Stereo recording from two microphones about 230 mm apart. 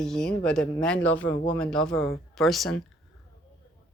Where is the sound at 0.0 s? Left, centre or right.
Centre.